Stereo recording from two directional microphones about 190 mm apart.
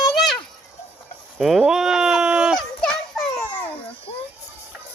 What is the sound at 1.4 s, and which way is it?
Fowl, centre (ahead or behind).